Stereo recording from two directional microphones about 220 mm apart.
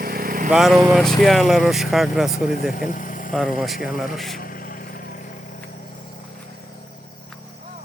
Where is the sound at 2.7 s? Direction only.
35° left (ahead or behind).